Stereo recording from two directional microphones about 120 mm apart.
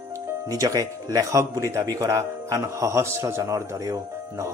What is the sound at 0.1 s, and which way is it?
Speech, 25° right (ahead or behind).